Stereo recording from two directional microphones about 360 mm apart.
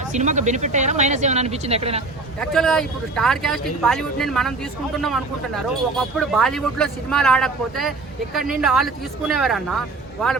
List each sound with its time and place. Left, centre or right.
0.1 s speech: centre
2.4 s speech: centre